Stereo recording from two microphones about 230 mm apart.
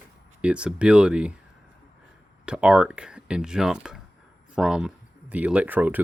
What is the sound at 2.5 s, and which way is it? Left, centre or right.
Speech, centre.